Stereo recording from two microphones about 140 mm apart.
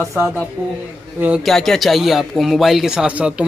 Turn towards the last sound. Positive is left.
turn(degrees=-5)  # may be behind; listen again after turning